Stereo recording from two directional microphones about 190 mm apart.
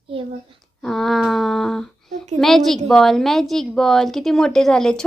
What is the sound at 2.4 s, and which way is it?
A woman's voice, centre (ahead or behind).